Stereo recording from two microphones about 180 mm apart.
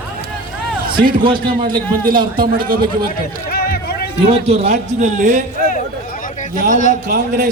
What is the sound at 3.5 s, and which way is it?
Run, 60° left (ahead or behind).